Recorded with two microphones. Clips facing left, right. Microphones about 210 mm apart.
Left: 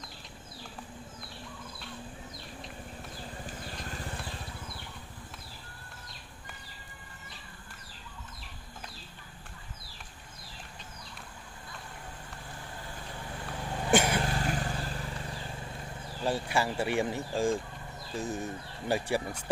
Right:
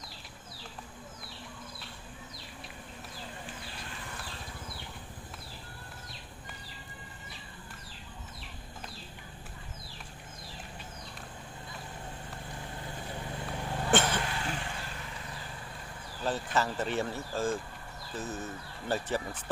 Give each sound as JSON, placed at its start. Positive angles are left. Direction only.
{"t": 13.8, "sound": "vehicle", "side_deg": 10}
{"t": 14.2, "sound": "vehicle", "side_deg": 40}
{"t": 16.2, "sound": "speech", "side_deg": 10}